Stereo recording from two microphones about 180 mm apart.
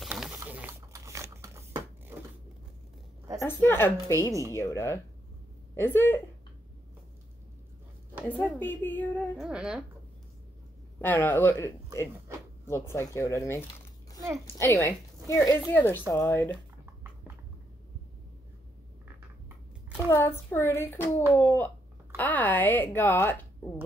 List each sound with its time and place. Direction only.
0.0 s mechanisms: 5° right (ahead or behind)
3.3 s speech: 15° left (ahead or behind)
8.3 s speech: 10° left (ahead or behind)
9.5 s a woman's voice: 5° right (ahead or behind)
11.0 s speech: 10° left (ahead or behind)
20.1 s speech: 15° left (ahead or behind)